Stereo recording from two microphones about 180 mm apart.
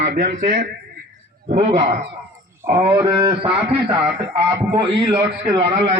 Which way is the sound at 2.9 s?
30° right (ahead or behind).